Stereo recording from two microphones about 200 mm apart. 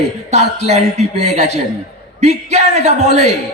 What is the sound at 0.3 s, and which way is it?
Speech, 55° left (ahead or behind).